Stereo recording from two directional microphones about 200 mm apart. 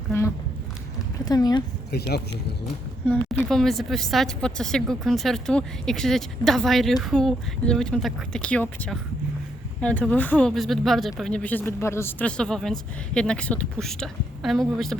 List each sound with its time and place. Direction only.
0.1 s speech: 15° left (ahead or behind)
1.9 s speech: 55° left (ahead or behind)
3.1 s a woman's voice: 5° left (ahead or behind)